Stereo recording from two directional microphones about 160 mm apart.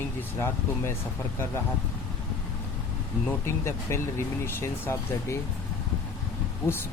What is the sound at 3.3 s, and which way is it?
Speech, 15° left (ahead or behind).